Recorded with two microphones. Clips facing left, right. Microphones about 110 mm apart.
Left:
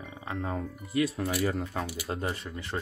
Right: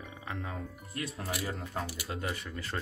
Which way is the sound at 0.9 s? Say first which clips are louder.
Left 10 dB; 90° left.